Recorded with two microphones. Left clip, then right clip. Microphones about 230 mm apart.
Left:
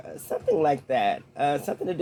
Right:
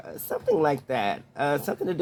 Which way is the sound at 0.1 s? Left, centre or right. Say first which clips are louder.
Even; right.